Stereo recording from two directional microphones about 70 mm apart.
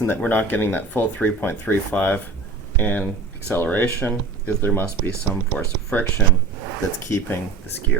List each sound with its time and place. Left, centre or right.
0.0 s speech: left